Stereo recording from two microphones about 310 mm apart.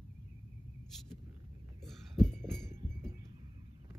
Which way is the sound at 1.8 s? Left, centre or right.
Centre.